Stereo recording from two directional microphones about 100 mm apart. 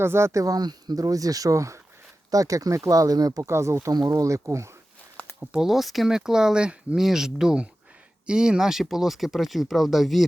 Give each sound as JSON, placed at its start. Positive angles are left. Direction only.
{"t": 0.0, "sound": "speech", "side_deg": -25}
{"t": 3.8, "sound": "speech", "side_deg": -40}
{"t": 5.4, "sound": "speech", "side_deg": -5}